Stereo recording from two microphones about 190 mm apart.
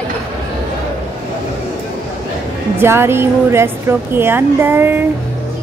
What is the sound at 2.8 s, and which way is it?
A woman's voice, 10° right (ahead or behind).